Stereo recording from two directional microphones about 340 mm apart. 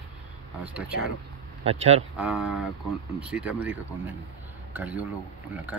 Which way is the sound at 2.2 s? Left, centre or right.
Centre.